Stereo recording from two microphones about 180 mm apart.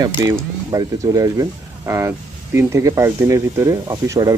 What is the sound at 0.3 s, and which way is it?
Speech, 20° right (ahead or behind).